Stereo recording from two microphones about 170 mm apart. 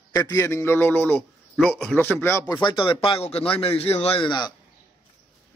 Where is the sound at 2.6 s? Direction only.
30° left (ahead or behind).